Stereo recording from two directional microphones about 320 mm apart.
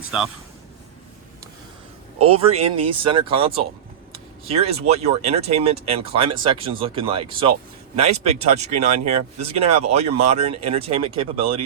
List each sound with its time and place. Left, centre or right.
0.1 s speech: centre
2.3 s speech: centre